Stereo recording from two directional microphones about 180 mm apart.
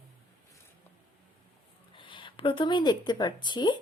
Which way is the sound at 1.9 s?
25° left (ahead or behind).